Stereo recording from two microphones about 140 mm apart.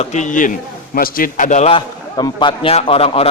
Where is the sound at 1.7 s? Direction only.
35° left (ahead or behind).